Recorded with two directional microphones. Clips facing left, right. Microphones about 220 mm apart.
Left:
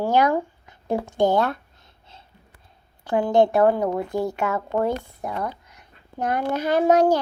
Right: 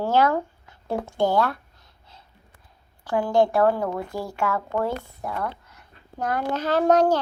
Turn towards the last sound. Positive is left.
turn(degrees=10)  # may be behind; listen again after turning